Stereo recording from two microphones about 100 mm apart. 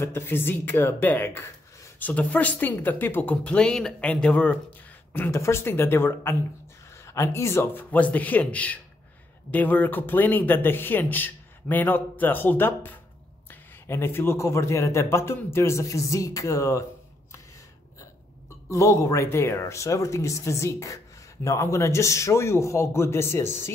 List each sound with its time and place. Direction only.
0.0 s speech: 25° left (ahead or behind)
5.1 s a man's voice: 25° left (ahead or behind)
18.7 s speech: 30° left (ahead or behind)